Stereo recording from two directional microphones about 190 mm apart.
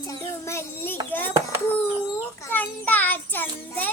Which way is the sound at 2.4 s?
10° left (ahead or behind).